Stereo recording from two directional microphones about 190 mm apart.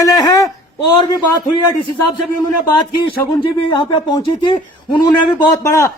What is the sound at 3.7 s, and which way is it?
A man's voice, 25° left (ahead or behind).